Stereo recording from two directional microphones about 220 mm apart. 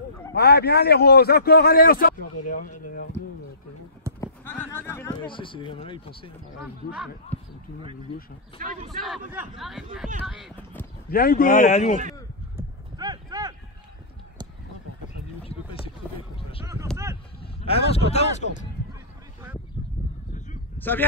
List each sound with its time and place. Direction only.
0.3 s a man's voice: 45° left (ahead or behind)
4.2 s a sound: 10° left (ahead or behind)
5.2 s speech: 25° left (ahead or behind)
7.3 s basketball bounce: 5° left (ahead or behind)
8.5 s speech: 40° right (ahead or behind)
8.9 s speech: centre (ahead or behind)
11.1 s a man's voice: 40° left (ahead or behind)
12.5 s clip-clop: 20° right (ahead or behind)
15.8 s a sound: 25° left (ahead or behind)
16.9 s a sound: 15° right (ahead or behind)
17.4 s a man's voice: 25° left (ahead or behind)
20.7 s a sound: 10° left (ahead or behind)